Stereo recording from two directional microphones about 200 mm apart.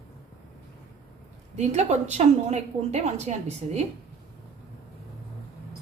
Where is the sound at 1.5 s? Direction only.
35° right (ahead or behind).